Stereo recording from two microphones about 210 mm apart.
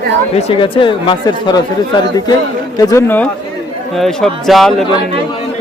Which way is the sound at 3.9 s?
Centre (ahead or behind).